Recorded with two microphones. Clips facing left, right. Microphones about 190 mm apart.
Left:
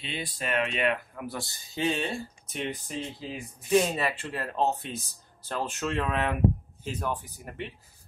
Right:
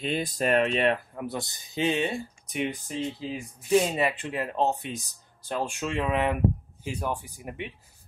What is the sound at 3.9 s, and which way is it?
Speech, 15° right (ahead or behind).